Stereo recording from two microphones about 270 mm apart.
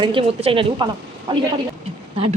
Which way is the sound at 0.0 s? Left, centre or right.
Centre.